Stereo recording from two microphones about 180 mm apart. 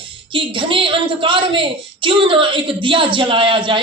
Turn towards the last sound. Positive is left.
turn(degrees=-30)  # may be behind; listen again after turning